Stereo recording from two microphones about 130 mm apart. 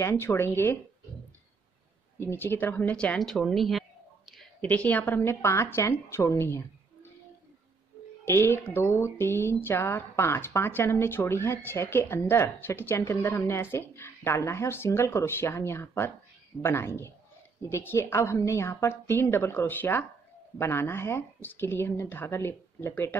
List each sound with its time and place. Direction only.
0.0 s speech: 20° left (ahead or behind)
2.1 s a woman's voice: 15° left (ahead or behind); by 3.8 s centre (ahead or behind)
4.6 s speech: 10° left (ahead or behind)
8.3 s speech: 20° left (ahead or behind)